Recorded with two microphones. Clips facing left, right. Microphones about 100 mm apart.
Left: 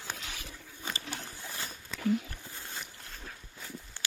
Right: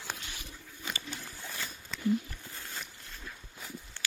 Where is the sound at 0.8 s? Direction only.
30° left (ahead or behind).